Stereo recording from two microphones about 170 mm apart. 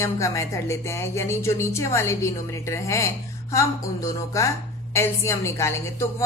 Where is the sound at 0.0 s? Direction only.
20° left (ahead or behind).